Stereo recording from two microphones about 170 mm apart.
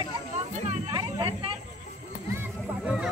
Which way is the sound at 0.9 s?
25° right (ahead or behind).